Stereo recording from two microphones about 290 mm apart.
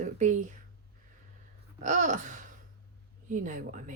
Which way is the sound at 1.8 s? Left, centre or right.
Right.